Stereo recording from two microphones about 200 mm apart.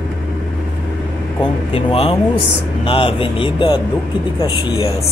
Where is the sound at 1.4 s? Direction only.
25° left (ahead or behind).